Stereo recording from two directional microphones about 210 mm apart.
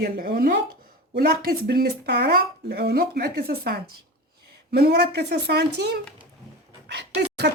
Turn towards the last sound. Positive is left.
turn(degrees=-50)  # may be behind; listen again after turning